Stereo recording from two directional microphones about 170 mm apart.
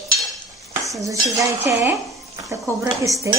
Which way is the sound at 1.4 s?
20° right (ahead or behind).